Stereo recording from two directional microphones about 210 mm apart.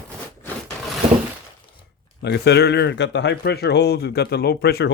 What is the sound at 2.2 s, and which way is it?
Speech, 55° left (ahead or behind).